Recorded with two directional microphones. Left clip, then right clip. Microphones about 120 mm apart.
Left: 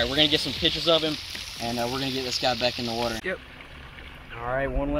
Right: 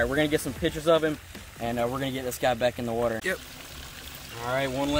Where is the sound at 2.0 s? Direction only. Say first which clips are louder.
Left 1 dB; 35° right (ahead or behind).